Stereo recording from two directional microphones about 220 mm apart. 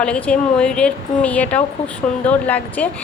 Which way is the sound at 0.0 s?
5° left (ahead or behind).